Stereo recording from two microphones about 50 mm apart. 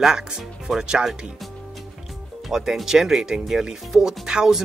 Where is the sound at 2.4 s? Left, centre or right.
Centre.